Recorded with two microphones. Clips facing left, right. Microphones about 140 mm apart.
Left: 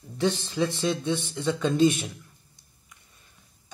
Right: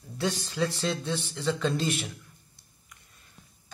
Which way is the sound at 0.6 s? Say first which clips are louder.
Left 3 dB; 15° left (ahead or behind).